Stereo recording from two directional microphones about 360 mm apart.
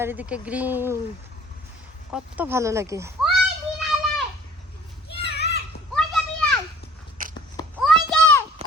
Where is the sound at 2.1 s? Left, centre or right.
Centre.